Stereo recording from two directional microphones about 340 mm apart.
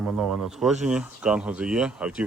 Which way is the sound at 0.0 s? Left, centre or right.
Centre.